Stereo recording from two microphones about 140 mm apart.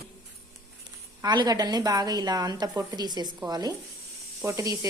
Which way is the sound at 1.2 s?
30° right (ahead or behind).